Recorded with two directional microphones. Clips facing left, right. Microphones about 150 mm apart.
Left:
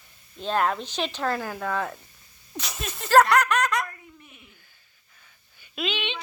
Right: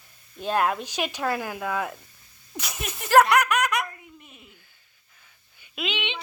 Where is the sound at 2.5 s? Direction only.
15° right (ahead or behind).